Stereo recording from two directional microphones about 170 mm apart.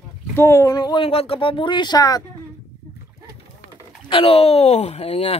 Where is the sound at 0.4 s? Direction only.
15° left (ahead or behind).